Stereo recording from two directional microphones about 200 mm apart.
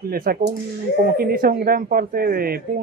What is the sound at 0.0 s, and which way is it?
Speech, 45° right (ahead or behind).